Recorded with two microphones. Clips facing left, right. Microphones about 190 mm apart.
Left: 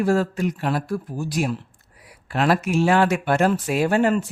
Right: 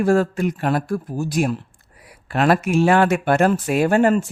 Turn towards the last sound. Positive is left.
turn(degrees=-45)  # may be behind; listen again after turning